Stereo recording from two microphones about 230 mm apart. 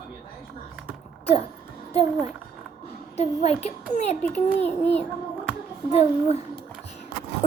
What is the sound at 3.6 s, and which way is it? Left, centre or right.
Speech, left.